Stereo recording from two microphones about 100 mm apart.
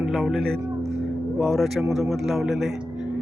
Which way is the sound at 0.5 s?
30° right (ahead or behind).